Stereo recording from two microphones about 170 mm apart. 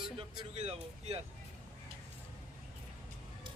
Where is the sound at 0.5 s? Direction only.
40° right (ahead or behind).